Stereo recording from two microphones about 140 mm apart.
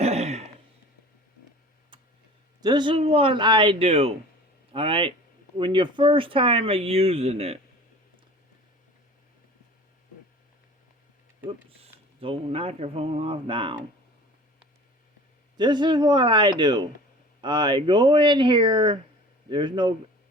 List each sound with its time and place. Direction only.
0.0 s throat clearing: 50° right (ahead or behind)
1.9 s tick: 35° right (ahead or behind)
2.6 s speech: 30° right (ahead or behind); by 7.6 s 45° right (ahead or behind)
11.4 s speech: 40° right (ahead or behind)
15.5 s speech: 30° right (ahead or behind)